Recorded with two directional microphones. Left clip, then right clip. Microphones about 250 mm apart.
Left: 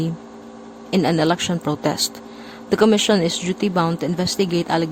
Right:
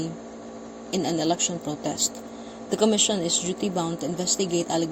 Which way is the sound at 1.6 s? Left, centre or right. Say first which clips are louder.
Left 8 dB; left.